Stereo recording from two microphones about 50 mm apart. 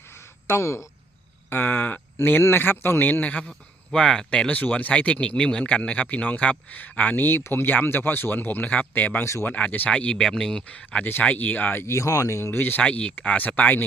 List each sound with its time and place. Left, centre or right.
0.4 s speech: left
1.5 s a man's voice: left
3.1 s a man's voice: left
3.9 s speech: centre
4.5 s a man's voice: left
8.6 s a man's voice: left
9.9 s speech: left
10.2 s speech: centre
10.7 s speech: left
11.0 s a man's voice: left
11.7 s speech: left
11.9 s speech: left
12.5 s a man's voice: left
12.8 s a man's voice: left